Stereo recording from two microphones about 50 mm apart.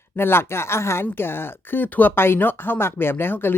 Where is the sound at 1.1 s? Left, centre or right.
Left.